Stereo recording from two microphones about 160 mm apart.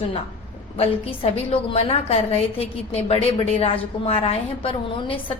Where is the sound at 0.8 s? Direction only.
40° left (ahead or behind).